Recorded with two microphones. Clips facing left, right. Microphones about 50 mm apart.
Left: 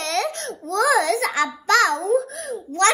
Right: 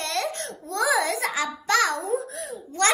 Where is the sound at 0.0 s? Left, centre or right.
Left.